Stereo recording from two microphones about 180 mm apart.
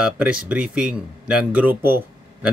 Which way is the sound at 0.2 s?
5° right (ahead or behind).